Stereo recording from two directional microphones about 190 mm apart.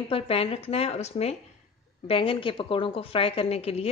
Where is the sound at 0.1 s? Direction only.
30° left (ahead or behind).